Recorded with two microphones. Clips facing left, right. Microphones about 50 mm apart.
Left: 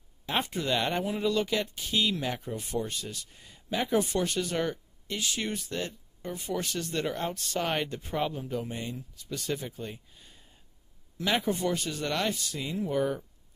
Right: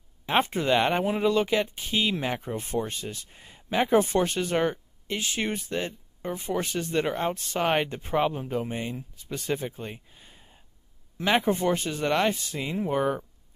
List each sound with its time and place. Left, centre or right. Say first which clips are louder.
0.3 s speech: right 6 dB; right